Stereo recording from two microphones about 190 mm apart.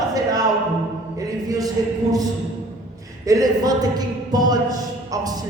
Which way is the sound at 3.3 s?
20° right (ahead or behind).